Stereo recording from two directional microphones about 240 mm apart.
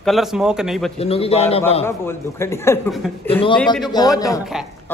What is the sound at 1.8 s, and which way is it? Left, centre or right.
A man's voice, centre.